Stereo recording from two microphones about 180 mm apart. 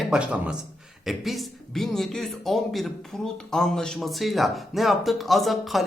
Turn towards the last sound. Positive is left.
turn(degrees=0)  # may be behind; listen again after turning